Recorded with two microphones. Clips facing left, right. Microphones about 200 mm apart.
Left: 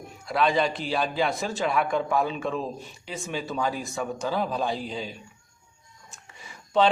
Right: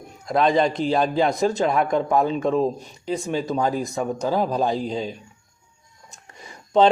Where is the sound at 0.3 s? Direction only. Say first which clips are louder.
Right 5 dB; 40° right (ahead or behind).